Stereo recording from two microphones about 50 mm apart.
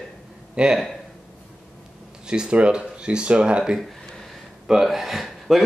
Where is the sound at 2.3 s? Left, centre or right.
Centre.